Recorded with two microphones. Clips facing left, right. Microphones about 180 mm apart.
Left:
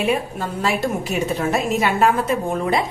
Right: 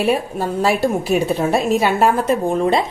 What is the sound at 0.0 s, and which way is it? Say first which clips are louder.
A woman's voice: right 3 dB; 35° right (ahead or behind).